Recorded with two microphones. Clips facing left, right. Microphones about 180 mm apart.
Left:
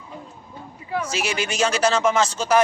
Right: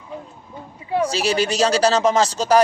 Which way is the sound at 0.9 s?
35° right (ahead or behind).